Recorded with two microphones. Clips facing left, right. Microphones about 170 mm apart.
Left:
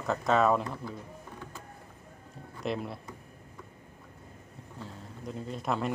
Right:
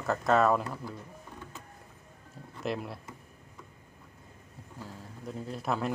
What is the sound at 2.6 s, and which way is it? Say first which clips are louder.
Speech: left 1 dB; centre (ahead or behind).